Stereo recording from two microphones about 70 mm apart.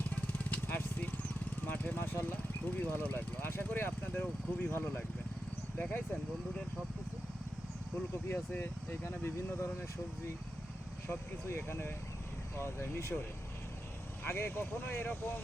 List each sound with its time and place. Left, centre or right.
0.2 s vehicle: left
2.3 s speech: left
7.9 s speech: left
11.1 s speech: left
14.3 s speech: left